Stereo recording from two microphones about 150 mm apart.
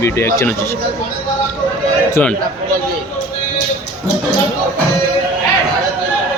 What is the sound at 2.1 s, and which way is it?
Speech, 10° left (ahead or behind).